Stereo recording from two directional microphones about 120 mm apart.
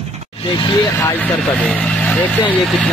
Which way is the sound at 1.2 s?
5° left (ahead or behind).